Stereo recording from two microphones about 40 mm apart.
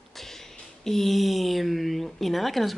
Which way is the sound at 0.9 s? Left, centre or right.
Centre.